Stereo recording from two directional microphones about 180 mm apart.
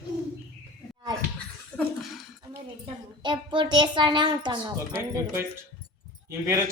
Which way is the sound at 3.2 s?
25° right (ahead or behind).